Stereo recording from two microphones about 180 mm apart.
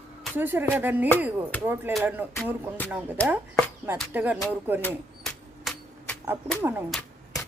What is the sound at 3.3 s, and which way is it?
Speech, 10° right (ahead or behind).